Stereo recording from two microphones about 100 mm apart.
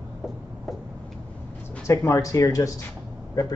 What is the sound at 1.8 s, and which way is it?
Speech, 30° left (ahead or behind).